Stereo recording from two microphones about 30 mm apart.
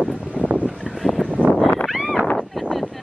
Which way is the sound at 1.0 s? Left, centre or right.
Centre.